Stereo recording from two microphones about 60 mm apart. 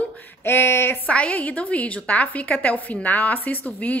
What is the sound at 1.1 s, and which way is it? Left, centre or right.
A woman's voice, left.